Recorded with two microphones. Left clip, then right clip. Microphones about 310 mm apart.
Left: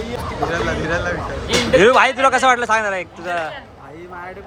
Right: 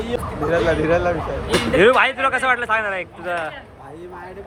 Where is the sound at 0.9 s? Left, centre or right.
Centre.